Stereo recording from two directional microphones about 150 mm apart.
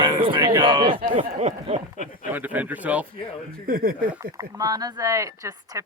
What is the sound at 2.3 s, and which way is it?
Speech, 10° right (ahead or behind).